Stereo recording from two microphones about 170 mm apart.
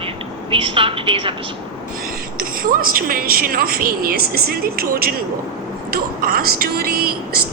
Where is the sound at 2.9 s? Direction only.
60° right (ahead or behind).